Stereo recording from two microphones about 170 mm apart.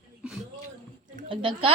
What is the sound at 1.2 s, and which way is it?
Speech, 30° right (ahead or behind).